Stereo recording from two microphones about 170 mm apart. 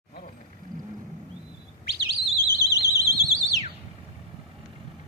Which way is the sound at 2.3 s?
65° left (ahead or behind).